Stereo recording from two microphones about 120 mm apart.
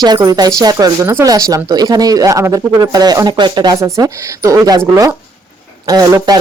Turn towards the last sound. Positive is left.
turn(degrees=-35)  # may be behind; listen again after turning